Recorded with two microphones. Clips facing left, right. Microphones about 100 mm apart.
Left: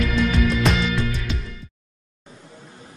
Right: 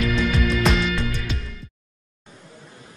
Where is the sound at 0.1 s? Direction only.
Centre (ahead or behind).